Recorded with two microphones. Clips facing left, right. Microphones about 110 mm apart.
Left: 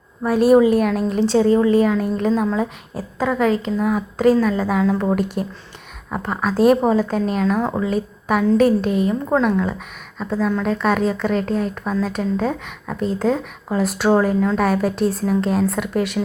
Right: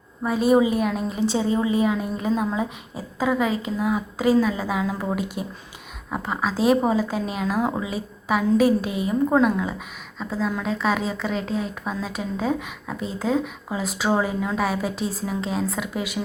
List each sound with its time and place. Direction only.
0.2 s speech: centre (ahead or behind)
6.5 s speech: 50° left (ahead or behind)
6.8 s a woman's voice: 5° right (ahead or behind)
8.9 s speech: 55° left (ahead or behind)
9.3 s speech: 5° right (ahead or behind)
11.3 s speech: 50° left (ahead or behind)
11.7 s speech: 5° right (ahead or behind)